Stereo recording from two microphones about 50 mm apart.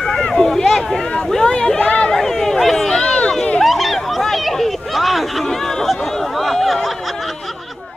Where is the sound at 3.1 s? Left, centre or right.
Left.